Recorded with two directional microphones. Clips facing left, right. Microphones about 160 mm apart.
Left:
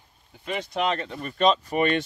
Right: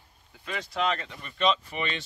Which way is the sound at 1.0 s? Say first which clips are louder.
Left 5 dB; 40° left (ahead or behind).